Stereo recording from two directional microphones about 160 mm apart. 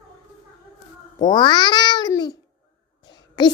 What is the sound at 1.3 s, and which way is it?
Child singing, 30° left (ahead or behind).